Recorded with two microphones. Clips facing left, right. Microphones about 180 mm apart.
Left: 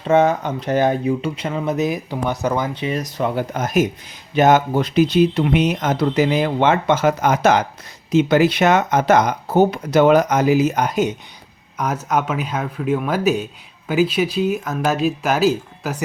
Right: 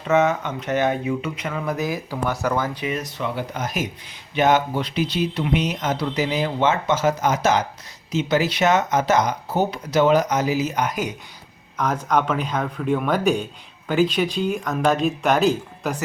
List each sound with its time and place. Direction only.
0.0 s speech: 30° left (ahead or behind)
2.8 s speech: 35° left (ahead or behind)
10.8 s speech: 25° left (ahead or behind)
11.8 s speech: 10° left (ahead or behind)